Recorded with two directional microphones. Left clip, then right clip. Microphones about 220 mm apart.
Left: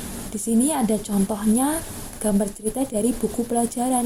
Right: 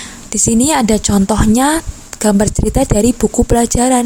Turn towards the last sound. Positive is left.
turn(degrees=-50)  # may be behind; listen again after turning